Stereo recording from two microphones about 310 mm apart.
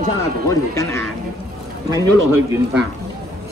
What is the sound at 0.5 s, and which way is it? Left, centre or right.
Speech, centre.